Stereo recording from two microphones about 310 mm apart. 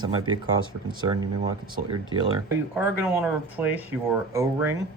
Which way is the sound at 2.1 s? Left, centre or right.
Centre.